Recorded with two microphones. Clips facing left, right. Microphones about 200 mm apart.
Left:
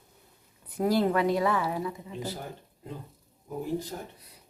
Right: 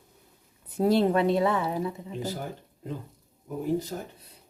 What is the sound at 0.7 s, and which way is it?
Speech, 25° right (ahead or behind).